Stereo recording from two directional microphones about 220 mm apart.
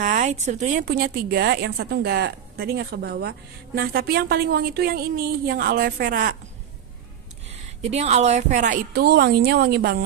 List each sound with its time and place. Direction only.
0.0 s a woman's voice: 35° right (ahead or behind)
7.4 s a woman's voice: 30° right (ahead or behind); by 10.0 s 45° right (ahead or behind)